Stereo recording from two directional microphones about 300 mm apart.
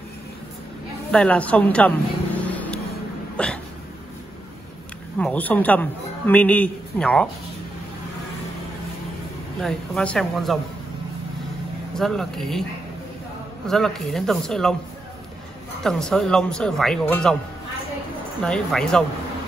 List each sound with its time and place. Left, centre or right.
1.1 s speech: centre
2.4 s vehicle: centre
3.4 s speech: centre
5.2 s speech: centre
9.6 s speech: centre
11.9 s speech: centre
13.7 s speech: centre
15.8 s speech: centre
18.4 s speech: centre